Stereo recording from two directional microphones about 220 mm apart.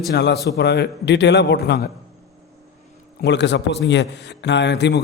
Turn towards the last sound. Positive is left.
turn(degrees=50)  # may be behind; listen again after turning